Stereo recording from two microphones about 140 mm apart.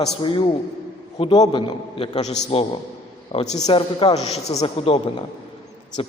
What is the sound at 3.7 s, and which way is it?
A man's voice, 40° left (ahead or behind).